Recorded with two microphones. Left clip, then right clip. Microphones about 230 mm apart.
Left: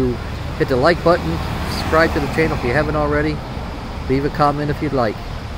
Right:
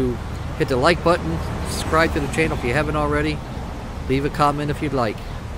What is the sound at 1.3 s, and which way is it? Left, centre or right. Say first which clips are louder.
Vehicle: left 4 dB; left.